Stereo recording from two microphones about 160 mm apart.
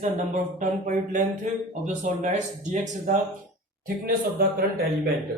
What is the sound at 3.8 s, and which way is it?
Speech, 70° right (ahead or behind).